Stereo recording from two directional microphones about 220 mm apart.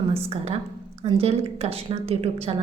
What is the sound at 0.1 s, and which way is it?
A woman's voice, 25° right (ahead or behind).